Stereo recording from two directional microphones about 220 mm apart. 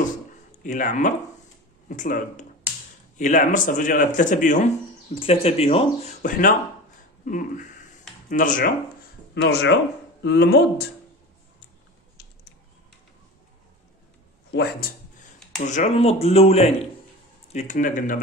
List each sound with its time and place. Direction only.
0.7 s a man's voice: 35° left (ahead or behind)
9.3 s speech: 50° left (ahead or behind)
14.5 s speech: 45° left (ahead or behind)
15.6 s a man's voice: 30° left (ahead or behind)